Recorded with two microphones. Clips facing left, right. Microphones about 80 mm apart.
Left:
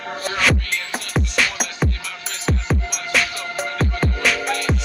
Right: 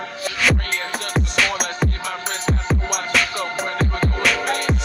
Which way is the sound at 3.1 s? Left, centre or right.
Centre.